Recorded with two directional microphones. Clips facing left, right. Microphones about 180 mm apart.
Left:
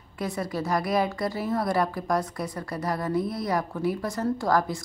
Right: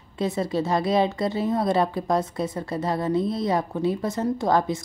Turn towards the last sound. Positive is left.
turn(degrees=-20)  # may be behind; listen again after turning